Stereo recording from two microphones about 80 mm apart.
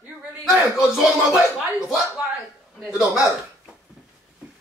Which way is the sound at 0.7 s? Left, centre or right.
Centre.